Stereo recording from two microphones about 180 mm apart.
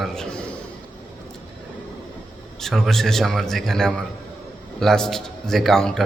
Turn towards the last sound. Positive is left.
turn(degrees=0)  # may be behind; listen again after turning